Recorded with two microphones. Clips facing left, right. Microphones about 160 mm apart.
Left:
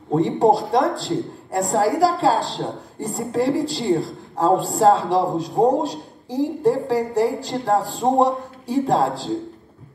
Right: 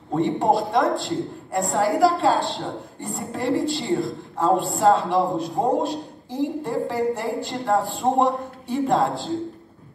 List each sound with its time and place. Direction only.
0.1 s a woman's voice: 35° left (ahead or behind)